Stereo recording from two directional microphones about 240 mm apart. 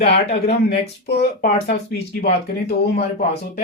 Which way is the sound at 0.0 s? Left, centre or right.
Left.